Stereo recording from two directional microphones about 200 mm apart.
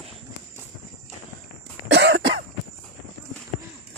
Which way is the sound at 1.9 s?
60° right (ahead or behind).